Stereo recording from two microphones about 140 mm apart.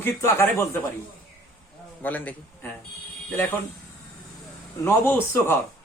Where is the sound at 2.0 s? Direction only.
10° left (ahead or behind).